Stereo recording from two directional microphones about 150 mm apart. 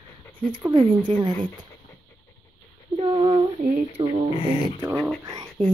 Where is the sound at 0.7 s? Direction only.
35° right (ahead or behind).